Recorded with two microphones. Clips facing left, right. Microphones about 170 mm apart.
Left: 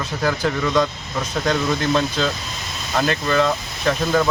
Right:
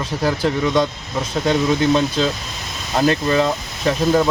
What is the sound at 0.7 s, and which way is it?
Speech, 25° right (ahead or behind).